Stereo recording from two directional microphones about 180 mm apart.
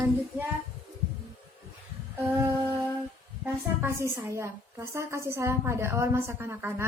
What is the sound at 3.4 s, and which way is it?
A woman's voice, 15° right (ahead or behind).